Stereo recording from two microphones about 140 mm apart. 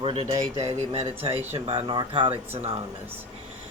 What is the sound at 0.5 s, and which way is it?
Speech, 30° right (ahead or behind).